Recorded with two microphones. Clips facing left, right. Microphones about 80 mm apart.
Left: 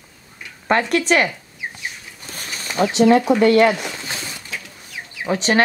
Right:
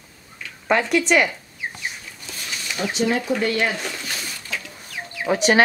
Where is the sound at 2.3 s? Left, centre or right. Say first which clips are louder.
Left 4 dB; left.